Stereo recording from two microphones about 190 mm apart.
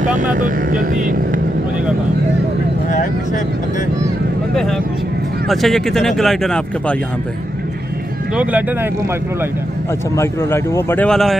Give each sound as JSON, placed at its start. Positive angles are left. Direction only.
{"t": 0.0, "sound": "speech", "side_deg": -40}
{"t": 5.5, "sound": "speech", "side_deg": 0}
{"t": 8.4, "sound": "speech", "side_deg": -10}
{"t": 10.1, "sound": "speech", "side_deg": 15}